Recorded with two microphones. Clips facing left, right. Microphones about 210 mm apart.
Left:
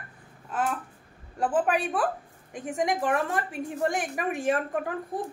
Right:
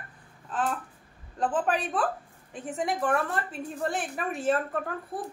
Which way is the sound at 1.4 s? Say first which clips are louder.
Left 2 dB; 10° left (ahead or behind).